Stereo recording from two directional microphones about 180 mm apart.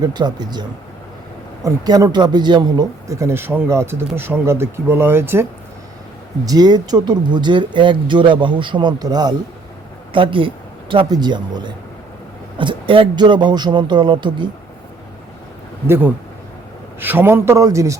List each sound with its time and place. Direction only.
0.0 s speech: 25° right (ahead or behind)
1.6 s speech: 20° right (ahead or behind)
15.9 s speech: 10° right (ahead or behind)